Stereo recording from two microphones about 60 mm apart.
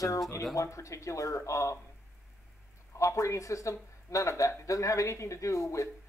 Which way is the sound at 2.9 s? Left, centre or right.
Left.